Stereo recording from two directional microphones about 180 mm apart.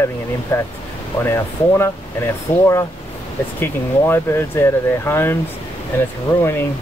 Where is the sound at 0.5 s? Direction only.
15° left (ahead or behind).